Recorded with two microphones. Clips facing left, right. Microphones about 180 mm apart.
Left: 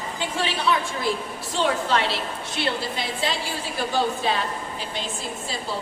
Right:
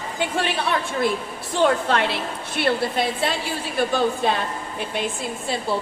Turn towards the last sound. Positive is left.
turn(degrees=-55)  # may be behind; listen again after turning